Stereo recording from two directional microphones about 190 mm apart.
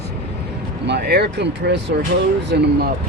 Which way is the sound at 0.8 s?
60° right (ahead or behind).